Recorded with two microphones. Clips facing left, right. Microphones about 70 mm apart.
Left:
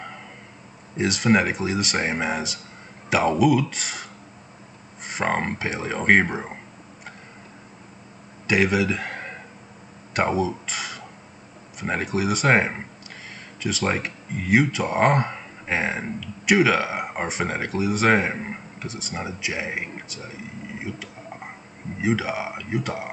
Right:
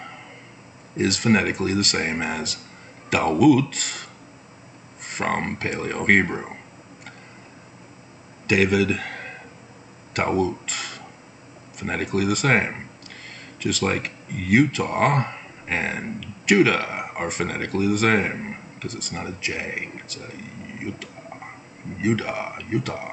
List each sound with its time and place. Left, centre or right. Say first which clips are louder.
0.9 s speech: even; centre
8.5 s a sound: right 1 dB; centre
10.1 s speech: even; centre
22.0 s speech: even; centre